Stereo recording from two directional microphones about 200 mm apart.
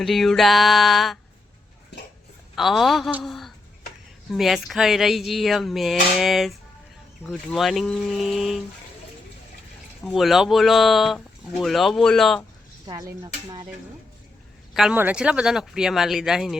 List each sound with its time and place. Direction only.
0.0 s speech: centre (ahead or behind)
2.6 s speech: centre (ahead or behind)
10.0 s speech: centre (ahead or behind)
12.9 s speech: 20° right (ahead or behind)
14.7 s speech: centre (ahead or behind)